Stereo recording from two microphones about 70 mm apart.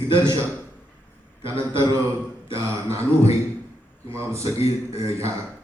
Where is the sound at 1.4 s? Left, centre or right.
Right.